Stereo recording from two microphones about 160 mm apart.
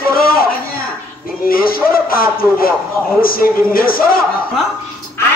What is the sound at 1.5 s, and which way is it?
A man's voice, 65° left (ahead or behind).